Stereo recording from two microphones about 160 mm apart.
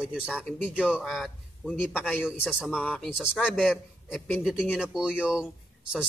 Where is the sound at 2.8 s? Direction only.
10° left (ahead or behind).